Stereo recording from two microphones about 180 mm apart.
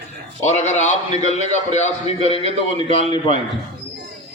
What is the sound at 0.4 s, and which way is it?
A man's voice, 40° left (ahead or behind).